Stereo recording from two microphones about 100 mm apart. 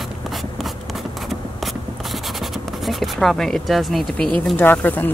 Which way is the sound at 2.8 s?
Centre (ahead or behind).